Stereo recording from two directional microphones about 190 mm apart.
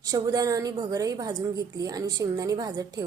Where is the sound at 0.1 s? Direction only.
20° right (ahead or behind).